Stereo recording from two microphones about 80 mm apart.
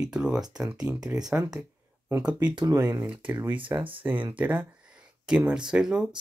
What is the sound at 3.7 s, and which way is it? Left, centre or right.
Speech, right.